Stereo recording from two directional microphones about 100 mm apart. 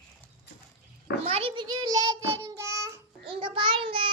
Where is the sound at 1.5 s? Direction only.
45° right (ahead or behind); by 3.0 s 30° right (ahead or behind).